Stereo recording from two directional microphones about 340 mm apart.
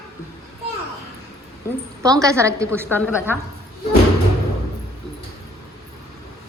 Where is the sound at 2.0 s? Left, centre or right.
Centre.